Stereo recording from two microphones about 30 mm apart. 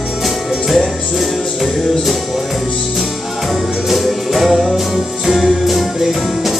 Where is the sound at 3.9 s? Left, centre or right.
Centre.